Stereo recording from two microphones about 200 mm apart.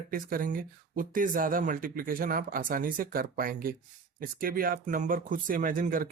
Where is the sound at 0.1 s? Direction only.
45° right (ahead or behind).